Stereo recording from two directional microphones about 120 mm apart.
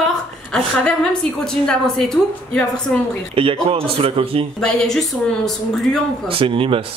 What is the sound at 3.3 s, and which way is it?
Speech, 50° right (ahead or behind).